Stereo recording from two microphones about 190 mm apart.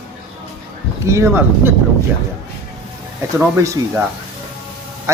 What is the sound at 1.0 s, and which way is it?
Speech, 15° right (ahead or behind).